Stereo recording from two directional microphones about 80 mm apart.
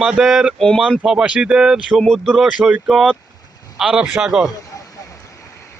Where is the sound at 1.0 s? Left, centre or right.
Centre.